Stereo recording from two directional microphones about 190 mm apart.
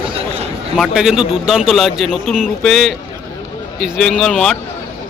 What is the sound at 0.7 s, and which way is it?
A man's voice, centre (ahead or behind).